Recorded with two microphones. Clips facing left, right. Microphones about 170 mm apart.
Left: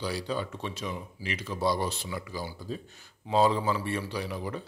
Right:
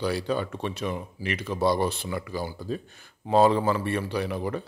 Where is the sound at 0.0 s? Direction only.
60° right (ahead or behind).